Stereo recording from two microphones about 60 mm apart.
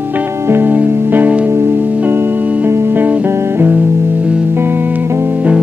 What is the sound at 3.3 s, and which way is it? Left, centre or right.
Music, right.